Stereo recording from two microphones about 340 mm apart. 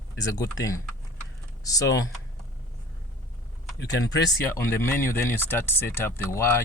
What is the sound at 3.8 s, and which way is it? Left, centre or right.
Speech, left.